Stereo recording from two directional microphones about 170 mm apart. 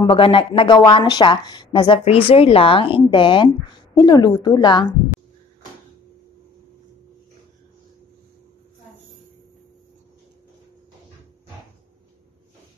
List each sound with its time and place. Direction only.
0.0 s a woman's voice: 30° left (ahead or behind)